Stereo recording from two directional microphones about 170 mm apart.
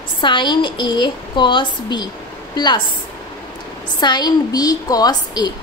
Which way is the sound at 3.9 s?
25° left (ahead or behind).